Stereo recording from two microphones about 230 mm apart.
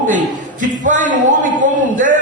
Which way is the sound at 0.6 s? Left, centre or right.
Right.